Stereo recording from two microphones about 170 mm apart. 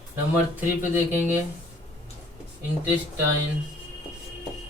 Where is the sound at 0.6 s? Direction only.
10° right (ahead or behind).